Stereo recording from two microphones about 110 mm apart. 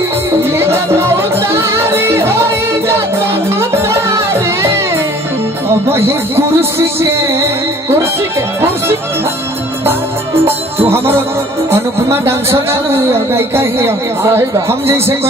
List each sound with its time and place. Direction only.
0.4 s music: 20° right (ahead or behind)
5.9 s speech: 25° right (ahead or behind)
10.9 s speech: 20° right (ahead or behind)